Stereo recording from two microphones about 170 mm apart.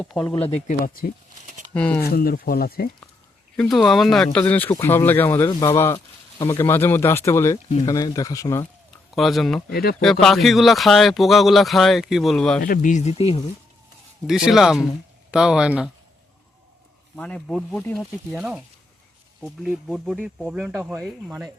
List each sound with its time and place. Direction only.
0.0 s speech: 5° left (ahead or behind)
0.3 s speech: 35° left (ahead or behind)
0.7 s speech: 55° left (ahead or behind)
1.7 s speech: 5° left (ahead or behind)
2.0 s speech: 65° left (ahead or behind)
3.6 s speech: centre (ahead or behind); by 8.6 s 20° left (ahead or behind)
9.1 s speech: centre (ahead or behind)
9.6 s speech: 70° left (ahead or behind)
10.0 s speech: 5° left (ahead or behind)
12.6 s speech: 50° left (ahead or behind); by 13.4 s 35° left (ahead or behind)
14.3 s speech: 5° right (ahead or behind)
17.2 s speech: 5° left (ahead or behind)
18.3 s speech: 5° right (ahead or behind)